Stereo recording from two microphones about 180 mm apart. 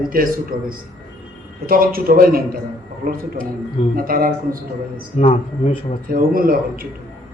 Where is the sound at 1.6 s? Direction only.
55° right (ahead or behind).